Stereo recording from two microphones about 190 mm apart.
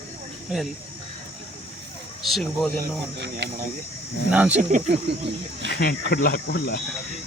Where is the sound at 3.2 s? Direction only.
65° right (ahead or behind).